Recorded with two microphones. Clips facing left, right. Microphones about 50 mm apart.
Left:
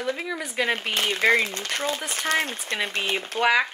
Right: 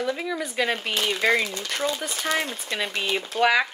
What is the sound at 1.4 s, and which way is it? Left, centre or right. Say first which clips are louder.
Speech: even; left.